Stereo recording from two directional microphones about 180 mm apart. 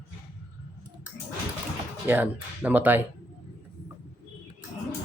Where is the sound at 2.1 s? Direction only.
10° right (ahead or behind).